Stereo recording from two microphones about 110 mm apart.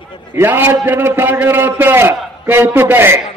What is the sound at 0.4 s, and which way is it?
A man's voice, 20° right (ahead or behind).